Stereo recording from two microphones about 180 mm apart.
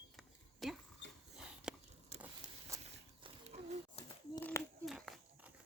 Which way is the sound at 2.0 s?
35° right (ahead or behind).